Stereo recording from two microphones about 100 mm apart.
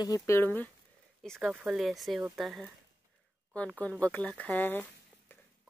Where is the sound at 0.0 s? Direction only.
35° left (ahead or behind).